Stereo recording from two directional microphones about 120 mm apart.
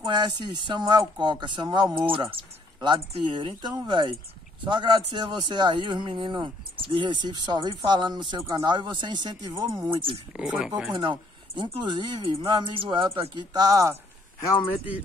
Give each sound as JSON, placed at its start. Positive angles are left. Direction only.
{"t": 0.0, "sound": "a man's voice", "side_deg": -40}
{"t": 8.4, "sound": "speech", "side_deg": -25}
{"t": 8.6, "sound": "a man's voice", "side_deg": -40}
{"t": 9.8, "sound": "speech", "side_deg": -50}
{"t": 10.3, "sound": "speech", "side_deg": -10}
{"t": 11.0, "sound": "speech", "side_deg": -45}
{"t": 13.5, "sound": "a man's voice", "side_deg": -30}